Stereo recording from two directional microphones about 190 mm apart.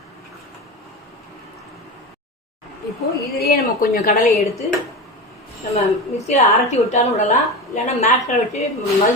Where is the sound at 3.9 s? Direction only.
55° left (ahead or behind).